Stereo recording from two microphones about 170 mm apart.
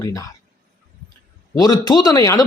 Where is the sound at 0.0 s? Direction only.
20° left (ahead or behind).